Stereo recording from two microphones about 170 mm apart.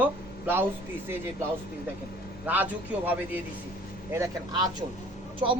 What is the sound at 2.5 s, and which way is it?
Speech, 10° right (ahead or behind).